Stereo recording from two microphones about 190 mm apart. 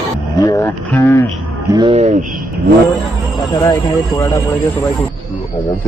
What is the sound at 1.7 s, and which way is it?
Speech, 30° right (ahead or behind).